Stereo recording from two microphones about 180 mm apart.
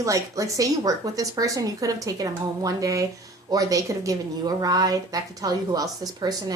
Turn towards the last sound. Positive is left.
turn(degrees=-20)  # may be behind; listen again after turning